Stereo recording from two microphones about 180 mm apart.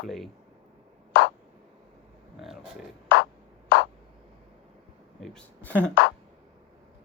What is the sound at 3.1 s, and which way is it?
Music, 70° left (ahead or behind).